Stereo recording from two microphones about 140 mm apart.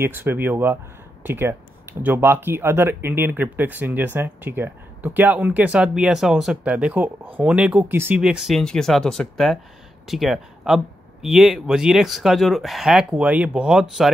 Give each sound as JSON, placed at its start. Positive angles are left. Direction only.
{"t": 0.0, "sound": "speech", "side_deg": -15}